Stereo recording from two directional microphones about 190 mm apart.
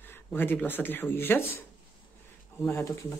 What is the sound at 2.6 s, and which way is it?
Speech, 15° left (ahead or behind).